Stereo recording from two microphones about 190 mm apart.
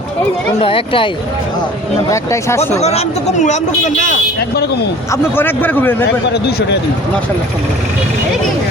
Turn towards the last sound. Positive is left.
turn(degrees=60)  # may be behind; listen again after turning